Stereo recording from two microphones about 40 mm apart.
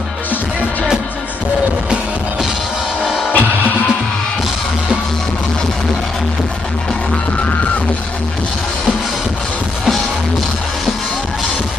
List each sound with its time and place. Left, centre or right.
3.3 s music: left